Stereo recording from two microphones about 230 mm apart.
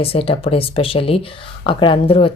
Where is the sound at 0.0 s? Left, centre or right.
Left.